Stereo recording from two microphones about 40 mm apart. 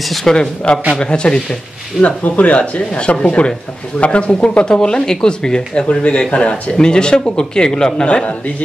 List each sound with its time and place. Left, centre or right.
0.3 s speech: centre
2.2 s speech: left